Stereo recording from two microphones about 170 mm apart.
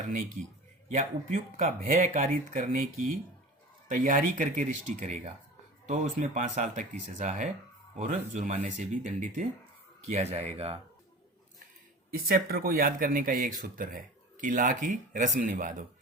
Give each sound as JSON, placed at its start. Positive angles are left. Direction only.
{"t": 0.9, "sound": "speech", "side_deg": -45}
{"t": 12.1, "sound": "speech", "side_deg": -60}